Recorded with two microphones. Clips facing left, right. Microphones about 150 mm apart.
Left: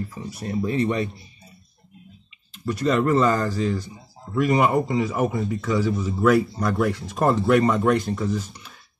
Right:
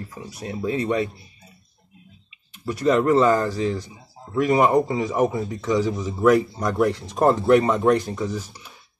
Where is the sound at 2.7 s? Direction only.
15° right (ahead or behind).